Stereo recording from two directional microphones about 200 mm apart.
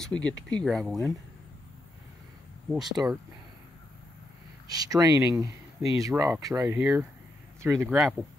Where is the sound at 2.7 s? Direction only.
Centre (ahead or behind).